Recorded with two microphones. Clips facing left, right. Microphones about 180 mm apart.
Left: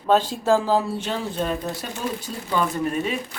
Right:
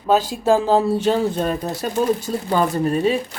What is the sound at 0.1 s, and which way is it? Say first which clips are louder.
Speech: right 2 dB; 10° right (ahead or behind).